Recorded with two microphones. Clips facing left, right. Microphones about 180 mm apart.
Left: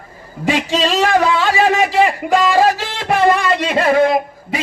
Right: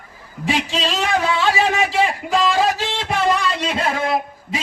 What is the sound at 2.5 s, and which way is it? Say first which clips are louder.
Music: left 5 dB; 60° left (ahead or behind).